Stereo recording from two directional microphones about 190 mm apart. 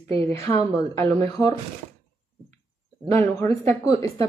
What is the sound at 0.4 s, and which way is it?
Speech, 15° left (ahead or behind).